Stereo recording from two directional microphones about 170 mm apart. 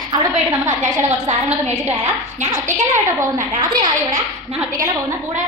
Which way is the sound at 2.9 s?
15° right (ahead or behind).